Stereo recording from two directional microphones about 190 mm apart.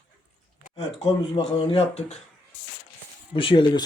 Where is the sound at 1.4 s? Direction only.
30° left (ahead or behind).